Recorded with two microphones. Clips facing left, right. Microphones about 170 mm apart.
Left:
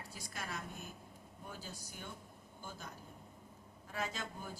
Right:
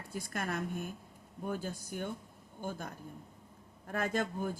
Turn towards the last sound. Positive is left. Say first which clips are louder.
# right 9 dB
turn(degrees=-55)  # may be behind; listen again after turning